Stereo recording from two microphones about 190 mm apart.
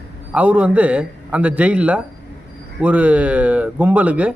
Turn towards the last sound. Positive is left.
turn(degrees=-5)  # may be behind; listen again after turning